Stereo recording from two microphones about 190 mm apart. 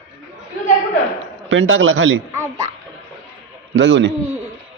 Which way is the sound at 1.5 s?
90° right.